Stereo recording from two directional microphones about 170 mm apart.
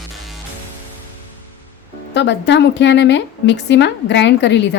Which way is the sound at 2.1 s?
90° left.